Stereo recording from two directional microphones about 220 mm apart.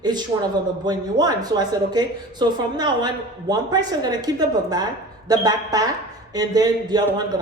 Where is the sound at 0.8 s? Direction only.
15° right (ahead or behind).